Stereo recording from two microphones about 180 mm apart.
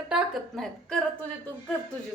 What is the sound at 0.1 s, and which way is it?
Speech, 5° left (ahead or behind).